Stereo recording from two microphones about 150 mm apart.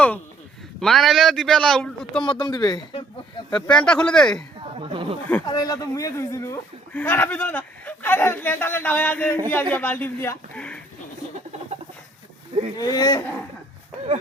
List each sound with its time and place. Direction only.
0.8 s a man's voice: centre (ahead or behind)
2.2 s speech: 30° left (ahead or behind)
3.7 s a man's voice: 5° left (ahead or behind)
4.8 s speech: 35° right (ahead or behind)
5.5 s a man's voice: 25° left (ahead or behind); by 10.8 s 10° left (ahead or behind)
12.7 s speech: 25° left (ahead or behind)